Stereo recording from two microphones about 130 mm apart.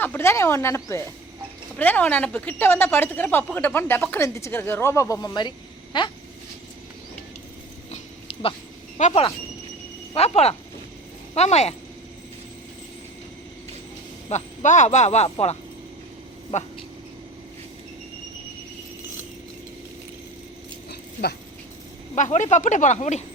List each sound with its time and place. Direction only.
0.0 s a woman's voice: 20° left (ahead or behind); by 6.1 s 35° left (ahead or behind)
7.9 s a sound: 50° left (ahead or behind)
9.0 s speech: 75° left (ahead or behind)
10.2 s speech: 55° left (ahead or behind)
14.3 s speech: 65° left (ahead or behind)
22.1 s speech: 70° left (ahead or behind)